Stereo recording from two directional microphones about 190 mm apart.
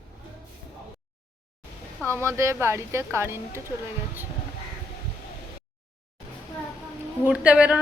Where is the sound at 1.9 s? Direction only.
10° left (ahead or behind).